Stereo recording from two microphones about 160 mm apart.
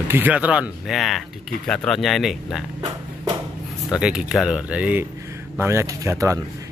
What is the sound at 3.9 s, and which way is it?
Speech, 5° right (ahead or behind).